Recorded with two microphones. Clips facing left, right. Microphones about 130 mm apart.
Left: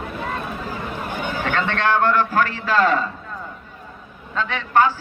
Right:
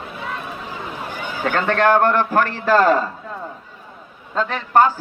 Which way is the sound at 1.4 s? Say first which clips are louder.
Right 5 dB; 45° right (ahead or behind).